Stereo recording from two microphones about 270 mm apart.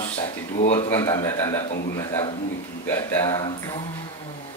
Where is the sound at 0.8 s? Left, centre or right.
Centre.